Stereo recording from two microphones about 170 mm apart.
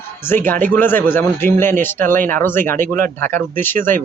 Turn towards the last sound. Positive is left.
turn(degrees=10)  # may be behind; listen again after turning